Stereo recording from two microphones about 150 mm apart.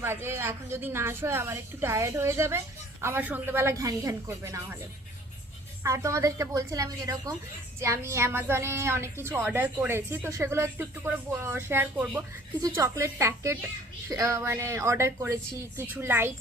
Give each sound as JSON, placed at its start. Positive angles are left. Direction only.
{"t": 0.0, "sound": "a woman's voice", "side_deg": -15}
{"t": 5.8, "sound": "a woman's voice", "side_deg": -20}
{"t": 12.6, "sound": "a woman's voice", "side_deg": -20}